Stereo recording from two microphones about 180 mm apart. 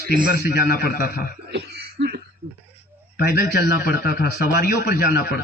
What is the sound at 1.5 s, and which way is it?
Throat clearing, 65° right (ahead or behind).